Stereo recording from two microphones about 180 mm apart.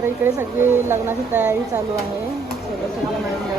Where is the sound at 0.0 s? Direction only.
10° right (ahead or behind).